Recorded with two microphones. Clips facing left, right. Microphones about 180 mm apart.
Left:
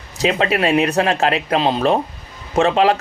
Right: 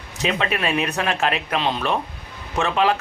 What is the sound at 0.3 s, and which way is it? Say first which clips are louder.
Speech: left 6 dB; 35° left (ahead or behind).